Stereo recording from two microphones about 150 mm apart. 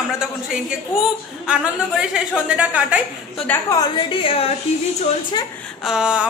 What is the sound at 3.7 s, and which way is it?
Speech, 30° left (ahead or behind).